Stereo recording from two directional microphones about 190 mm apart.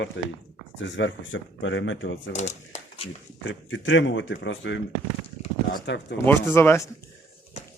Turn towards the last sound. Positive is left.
turn(degrees=10)  # may be behind; listen again after turning